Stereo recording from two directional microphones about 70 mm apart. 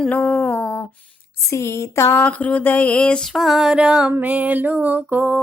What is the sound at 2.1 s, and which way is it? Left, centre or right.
Mantra, left.